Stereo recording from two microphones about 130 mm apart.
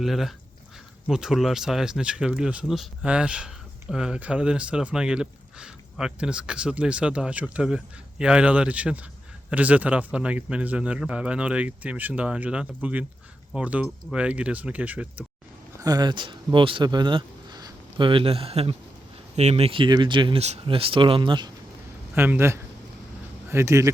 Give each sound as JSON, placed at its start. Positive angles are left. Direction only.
{"t": 0.0, "sound": "speech", "side_deg": 0}
{"t": 15.8, "sound": "speech", "side_deg": -30}
{"t": 20.4, "sound": "speech", "side_deg": -50}
{"t": 22.1, "sound": "speech", "side_deg": -15}